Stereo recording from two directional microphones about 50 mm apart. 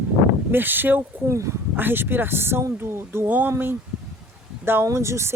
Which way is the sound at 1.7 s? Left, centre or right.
Right.